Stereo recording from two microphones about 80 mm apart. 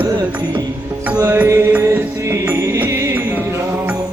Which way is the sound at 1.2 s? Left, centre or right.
Right.